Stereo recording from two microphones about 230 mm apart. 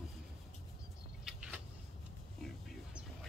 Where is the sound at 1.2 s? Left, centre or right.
Centre.